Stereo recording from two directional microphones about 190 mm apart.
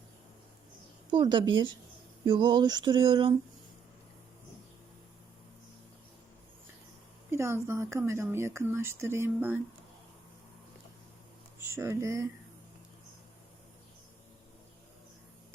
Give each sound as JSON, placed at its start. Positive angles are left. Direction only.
{"t": 1.1, "sound": "a sound", "side_deg": -25}
{"t": 7.3, "sound": "speech", "side_deg": -15}
{"t": 11.6, "sound": "speech", "side_deg": -15}